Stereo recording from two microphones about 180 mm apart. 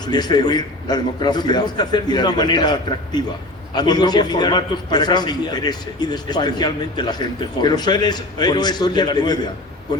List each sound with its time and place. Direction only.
0.1 s a man's voice: 25° left (ahead or behind)
3.8 s a man's voice: 25° left (ahead or behind)